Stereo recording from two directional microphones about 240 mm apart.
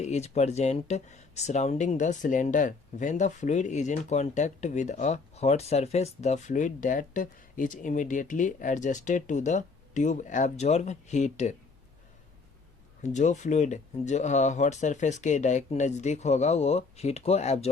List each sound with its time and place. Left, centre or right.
0.0 s speech: left
13.0 s speech: left